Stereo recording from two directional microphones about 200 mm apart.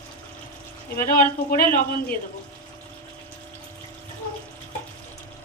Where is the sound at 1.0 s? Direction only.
45° left (ahead or behind).